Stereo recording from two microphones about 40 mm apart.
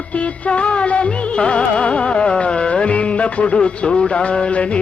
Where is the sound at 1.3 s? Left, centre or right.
Left.